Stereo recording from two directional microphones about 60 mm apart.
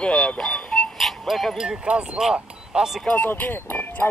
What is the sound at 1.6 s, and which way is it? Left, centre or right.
Speech, centre.